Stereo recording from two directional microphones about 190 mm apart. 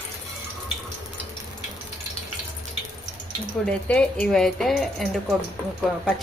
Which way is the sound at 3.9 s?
5° left (ahead or behind).